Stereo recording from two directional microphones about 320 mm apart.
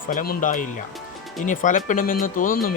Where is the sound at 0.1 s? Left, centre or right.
Left.